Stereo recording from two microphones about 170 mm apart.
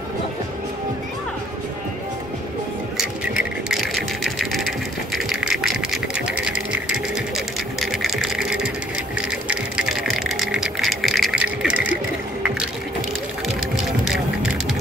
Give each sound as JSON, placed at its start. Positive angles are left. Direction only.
{"t": 3.0, "sound": "sewing machine", "side_deg": -5}
{"t": 9.3, "sound": "music", "side_deg": -5}
{"t": 13.8, "sound": "vehicle", "side_deg": -5}